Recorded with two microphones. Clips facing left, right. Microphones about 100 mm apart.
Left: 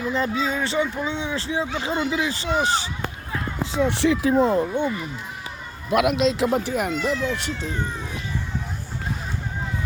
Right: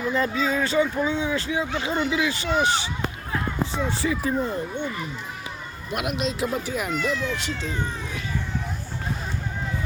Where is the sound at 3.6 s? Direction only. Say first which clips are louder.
Left 8 dB; 75° left (ahead or behind).